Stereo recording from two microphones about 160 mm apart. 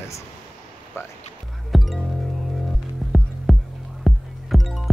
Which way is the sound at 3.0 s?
5° right (ahead or behind).